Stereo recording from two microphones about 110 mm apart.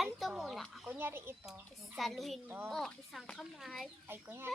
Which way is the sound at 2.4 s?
20° right (ahead or behind).